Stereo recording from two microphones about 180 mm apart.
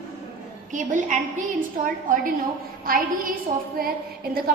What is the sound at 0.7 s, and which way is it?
Speech, 45° right (ahead or behind).